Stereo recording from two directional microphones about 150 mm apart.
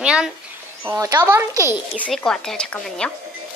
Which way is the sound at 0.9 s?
20° right (ahead or behind).